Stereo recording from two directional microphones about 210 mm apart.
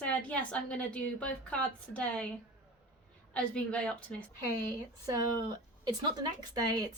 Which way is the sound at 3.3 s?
5° left (ahead or behind).